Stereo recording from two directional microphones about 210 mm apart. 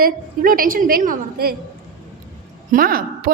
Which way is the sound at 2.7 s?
40° right (ahead or behind).